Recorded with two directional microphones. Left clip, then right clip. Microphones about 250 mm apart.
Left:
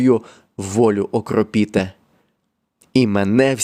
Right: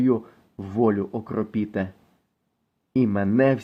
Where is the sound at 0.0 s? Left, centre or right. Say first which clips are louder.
Left 7 dB; left.